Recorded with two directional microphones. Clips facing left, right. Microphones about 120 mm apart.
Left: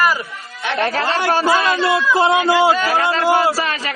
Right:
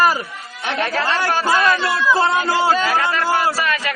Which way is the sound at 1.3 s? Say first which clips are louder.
Left 2 dB; 25° left (ahead or behind).